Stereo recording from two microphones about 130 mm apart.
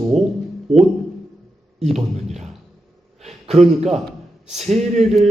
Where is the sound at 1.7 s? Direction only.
55° right (ahead or behind).